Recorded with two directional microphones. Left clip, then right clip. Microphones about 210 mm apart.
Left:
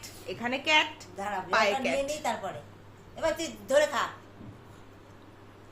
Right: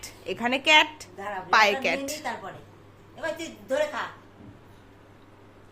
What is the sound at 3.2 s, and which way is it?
Speech, 25° left (ahead or behind).